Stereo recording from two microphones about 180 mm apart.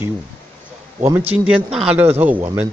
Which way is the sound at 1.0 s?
15° right (ahead or behind).